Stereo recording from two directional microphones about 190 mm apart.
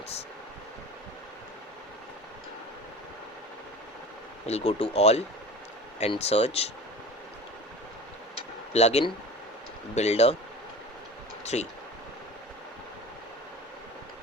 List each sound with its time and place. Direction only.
4.4 s speech: 35° left (ahead or behind)
8.7 s speech: 35° left (ahead or behind)
11.4 s speech: 35° left (ahead or behind)